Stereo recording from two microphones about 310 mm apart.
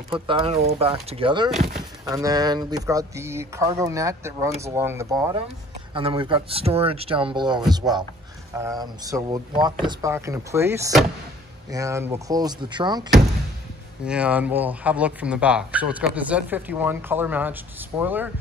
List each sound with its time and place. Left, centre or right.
0.1 s speech: centre
14.0 s speech: centre